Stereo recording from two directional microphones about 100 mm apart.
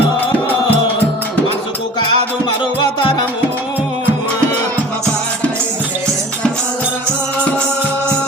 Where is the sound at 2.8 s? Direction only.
55° left (ahead or behind).